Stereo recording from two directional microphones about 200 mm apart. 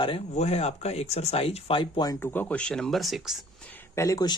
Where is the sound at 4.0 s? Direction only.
15° left (ahead or behind).